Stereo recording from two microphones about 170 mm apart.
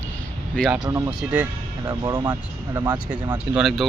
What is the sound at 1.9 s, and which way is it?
Speech, 20° right (ahead or behind).